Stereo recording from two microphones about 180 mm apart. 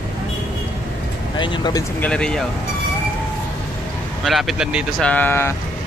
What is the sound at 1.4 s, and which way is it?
Speech, 25° left (ahead or behind).